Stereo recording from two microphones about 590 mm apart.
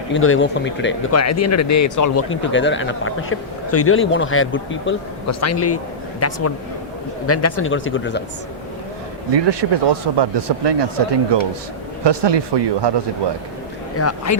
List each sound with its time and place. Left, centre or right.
0.1 s speech: centre
9.3 s speech: right
14.0 s speech: left